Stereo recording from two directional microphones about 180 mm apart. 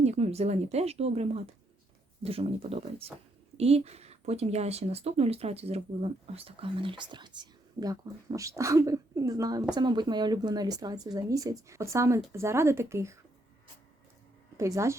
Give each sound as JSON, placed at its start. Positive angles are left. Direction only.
{"t": 0.0, "sound": "a woman's voice", "side_deg": -35}
{"t": 14.6, "sound": "speech", "side_deg": -15}